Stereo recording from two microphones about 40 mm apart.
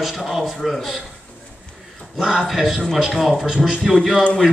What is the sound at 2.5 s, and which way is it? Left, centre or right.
A man's voice, centre.